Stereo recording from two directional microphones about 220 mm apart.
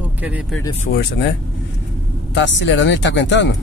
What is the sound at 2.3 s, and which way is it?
Speech, 55° left (ahead or behind).